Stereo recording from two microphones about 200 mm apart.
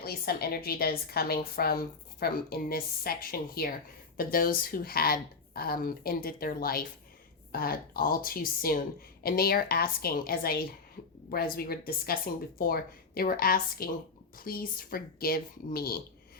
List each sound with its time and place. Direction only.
0.0 s a woman's voice: 50° left (ahead or behind)